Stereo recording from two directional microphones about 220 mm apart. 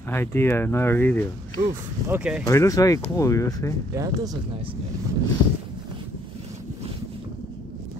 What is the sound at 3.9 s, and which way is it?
Speech, 15° right (ahead or behind).